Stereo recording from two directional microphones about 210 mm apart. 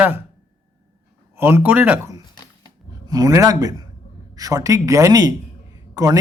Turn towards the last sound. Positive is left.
turn(degrees=-15)  # may be behind; listen again after turning